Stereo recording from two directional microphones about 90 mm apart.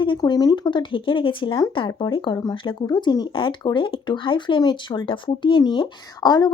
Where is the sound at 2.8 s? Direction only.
50° left (ahead or behind).